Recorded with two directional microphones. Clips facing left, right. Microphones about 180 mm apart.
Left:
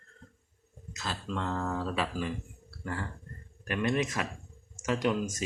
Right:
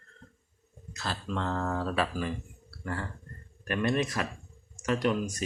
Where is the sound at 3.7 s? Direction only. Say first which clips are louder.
Right 1 dB; 15° left (ahead or behind).